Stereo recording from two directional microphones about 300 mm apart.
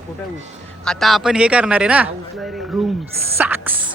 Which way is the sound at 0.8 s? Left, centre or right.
Centre.